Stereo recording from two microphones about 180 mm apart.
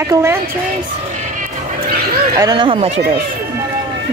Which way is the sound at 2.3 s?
20° right (ahead or behind).